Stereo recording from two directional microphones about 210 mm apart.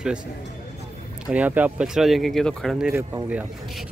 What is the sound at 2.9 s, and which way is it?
Speech, 15° right (ahead or behind).